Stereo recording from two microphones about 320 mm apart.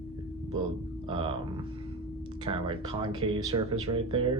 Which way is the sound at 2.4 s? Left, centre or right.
Centre.